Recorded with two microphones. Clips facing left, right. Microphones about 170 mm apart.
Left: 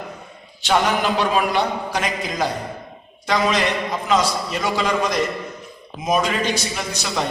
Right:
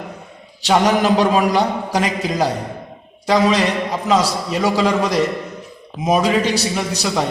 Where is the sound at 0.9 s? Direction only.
40° right (ahead or behind).